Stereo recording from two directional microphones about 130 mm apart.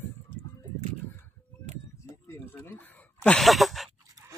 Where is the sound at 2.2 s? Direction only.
15° left (ahead or behind).